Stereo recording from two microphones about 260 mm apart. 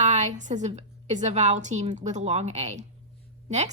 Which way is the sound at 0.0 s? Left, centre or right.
Right.